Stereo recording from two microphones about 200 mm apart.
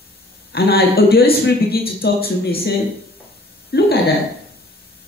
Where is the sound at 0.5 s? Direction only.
50° left (ahead or behind).